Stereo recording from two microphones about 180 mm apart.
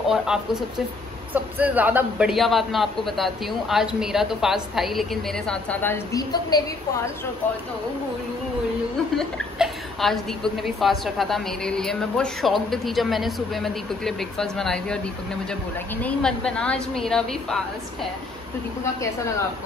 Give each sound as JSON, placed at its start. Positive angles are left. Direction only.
{"t": 0.1, "sound": "a woman's voice", "side_deg": -5}
{"t": 9.1, "sound": "a woman's voice", "side_deg": 0}
{"t": 16.0, "sound": "a woman's voice", "side_deg": 5}